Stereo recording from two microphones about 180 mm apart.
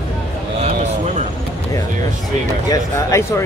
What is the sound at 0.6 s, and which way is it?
Speech, 35° right (ahead or behind).